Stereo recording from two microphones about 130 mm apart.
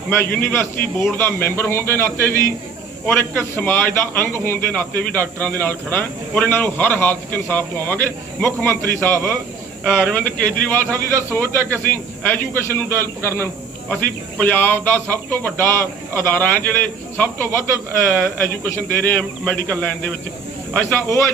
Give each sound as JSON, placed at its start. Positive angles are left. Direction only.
{"t": 0.1, "sound": "a man's voice", "side_deg": 15}
{"t": 20.8, "sound": "a man's voice", "side_deg": 20}